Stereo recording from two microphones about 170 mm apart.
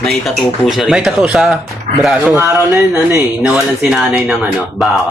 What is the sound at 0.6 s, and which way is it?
Speech, centre (ahead or behind).